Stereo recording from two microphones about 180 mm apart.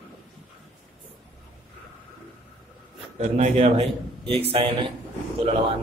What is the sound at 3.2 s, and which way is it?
A man's voice, 40° right (ahead or behind).